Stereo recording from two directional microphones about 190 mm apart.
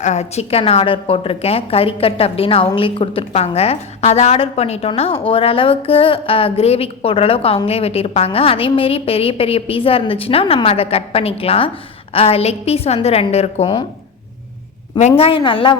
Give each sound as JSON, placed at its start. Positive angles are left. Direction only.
{"t": 0.0, "sound": "a woman's voice", "side_deg": 35}
{"t": 14.9, "sound": "a woman's voice", "side_deg": 35}